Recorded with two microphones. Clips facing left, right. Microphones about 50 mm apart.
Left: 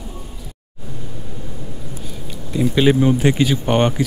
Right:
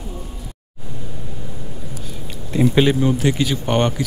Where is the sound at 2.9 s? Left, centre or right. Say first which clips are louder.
Left 3 dB; centre.